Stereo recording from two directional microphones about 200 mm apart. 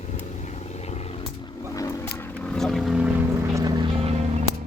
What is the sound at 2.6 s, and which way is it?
Boat, centre (ahead or behind).